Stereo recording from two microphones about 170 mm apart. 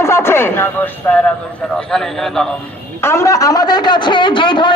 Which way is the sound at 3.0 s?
15° left (ahead or behind).